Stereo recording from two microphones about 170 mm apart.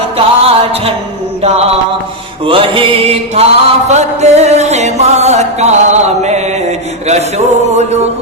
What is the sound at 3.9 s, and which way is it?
Music, 40° right (ahead or behind).